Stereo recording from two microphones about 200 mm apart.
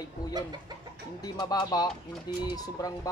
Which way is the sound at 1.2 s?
20° left (ahead or behind).